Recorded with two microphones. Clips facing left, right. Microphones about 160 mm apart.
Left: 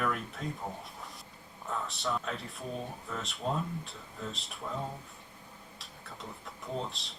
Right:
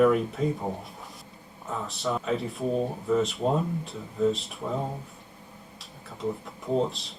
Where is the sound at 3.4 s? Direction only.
40° right (ahead or behind).